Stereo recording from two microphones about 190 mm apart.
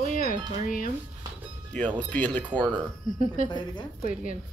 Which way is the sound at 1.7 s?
5° left (ahead or behind).